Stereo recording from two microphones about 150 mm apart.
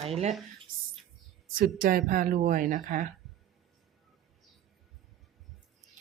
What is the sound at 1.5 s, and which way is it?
Speech, 70° right (ahead or behind).